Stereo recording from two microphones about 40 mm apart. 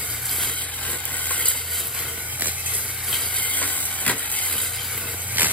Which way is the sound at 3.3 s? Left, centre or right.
Left.